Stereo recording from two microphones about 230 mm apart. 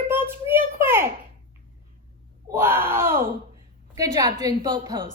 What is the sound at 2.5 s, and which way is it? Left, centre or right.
A child's voice, centre.